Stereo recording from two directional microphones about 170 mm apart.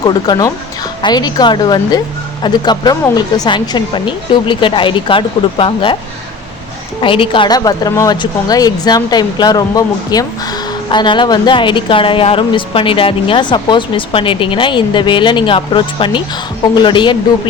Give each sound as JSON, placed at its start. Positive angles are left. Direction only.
{"t": 0.0, "sound": "a woman's voice", "side_deg": 25}
{"t": 7.0, "sound": "a woman's voice", "side_deg": 30}